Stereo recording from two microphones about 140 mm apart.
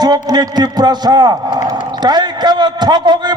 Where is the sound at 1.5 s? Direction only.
30° right (ahead or behind).